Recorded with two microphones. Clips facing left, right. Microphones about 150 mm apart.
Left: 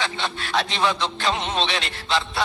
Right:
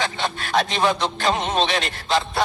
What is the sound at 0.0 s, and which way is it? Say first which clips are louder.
Speech: right 2 dB; 45° right (ahead or behind).